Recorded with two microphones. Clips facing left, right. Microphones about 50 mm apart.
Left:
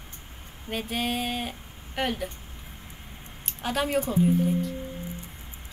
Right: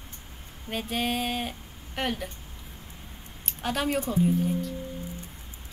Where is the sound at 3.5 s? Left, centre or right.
Centre.